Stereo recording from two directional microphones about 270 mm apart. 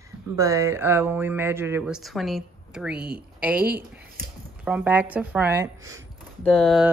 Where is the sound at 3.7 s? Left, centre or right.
Right.